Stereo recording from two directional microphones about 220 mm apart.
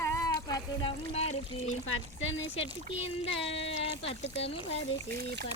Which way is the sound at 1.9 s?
60° left (ahead or behind).